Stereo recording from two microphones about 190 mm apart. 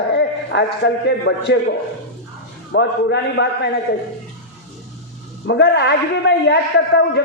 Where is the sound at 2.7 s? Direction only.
65° left (ahead or behind).